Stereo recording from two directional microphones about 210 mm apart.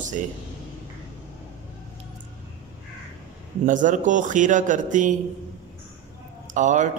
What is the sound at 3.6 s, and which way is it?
A man's voice, 35° right (ahead or behind).